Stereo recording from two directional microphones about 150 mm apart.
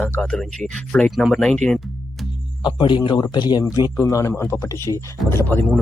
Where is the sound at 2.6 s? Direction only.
30° left (ahead or behind); by 5.6 s 15° left (ahead or behind).